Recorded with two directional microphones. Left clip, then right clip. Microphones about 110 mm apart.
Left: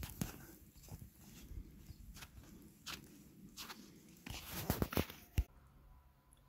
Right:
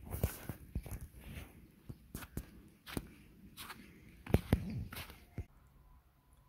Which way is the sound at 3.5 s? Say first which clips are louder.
Right 1 dB; 5° right (ahead or behind).